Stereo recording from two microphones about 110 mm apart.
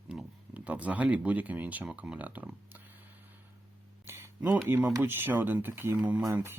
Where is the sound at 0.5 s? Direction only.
15° right (ahead or behind).